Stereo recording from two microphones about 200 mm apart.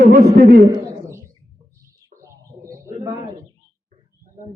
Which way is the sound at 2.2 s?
15° right (ahead or behind).